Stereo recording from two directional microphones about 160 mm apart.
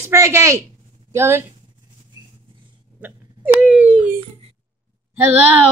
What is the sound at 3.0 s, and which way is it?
Speech, 10° right (ahead or behind).